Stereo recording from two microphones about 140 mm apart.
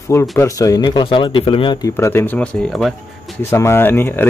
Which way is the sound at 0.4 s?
25° left (ahead or behind).